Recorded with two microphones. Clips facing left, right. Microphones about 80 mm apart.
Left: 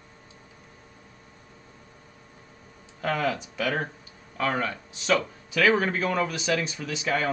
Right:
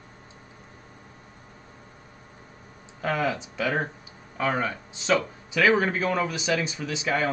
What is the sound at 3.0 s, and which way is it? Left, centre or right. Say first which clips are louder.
Speech: even; centre.